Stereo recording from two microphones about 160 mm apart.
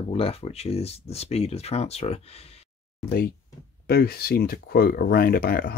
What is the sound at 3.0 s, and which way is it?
Speech, 85° left.